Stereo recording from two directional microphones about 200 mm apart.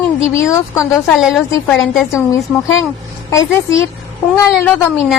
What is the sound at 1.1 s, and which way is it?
Speech, centre (ahead or behind).